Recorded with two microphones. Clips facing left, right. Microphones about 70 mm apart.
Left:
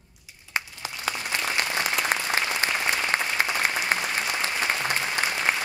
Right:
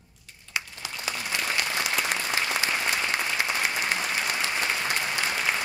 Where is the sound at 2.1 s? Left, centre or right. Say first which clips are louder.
Left 2 dB; left.